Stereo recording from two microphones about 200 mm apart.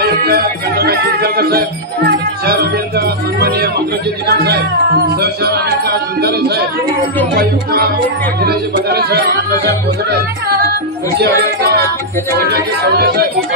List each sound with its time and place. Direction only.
0.0 s music: 50° right (ahead or behind)
4.3 s speech: 55° right (ahead or behind)
8.4 s speech: 55° right (ahead or behind)
11.1 s a child's voice: 55° right (ahead or behind)